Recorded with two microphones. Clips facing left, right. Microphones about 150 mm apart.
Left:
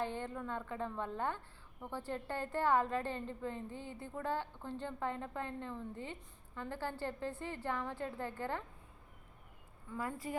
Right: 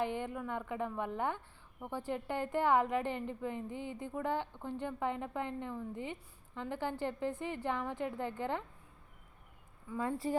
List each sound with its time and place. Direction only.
0.0 s a woman's voice: 15° right (ahead or behind)
10.0 s speech: 30° right (ahead or behind)